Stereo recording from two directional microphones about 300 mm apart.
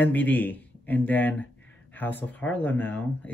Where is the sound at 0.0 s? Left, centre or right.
Centre.